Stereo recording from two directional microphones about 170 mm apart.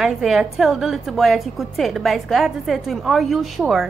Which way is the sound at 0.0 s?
Centre (ahead or behind).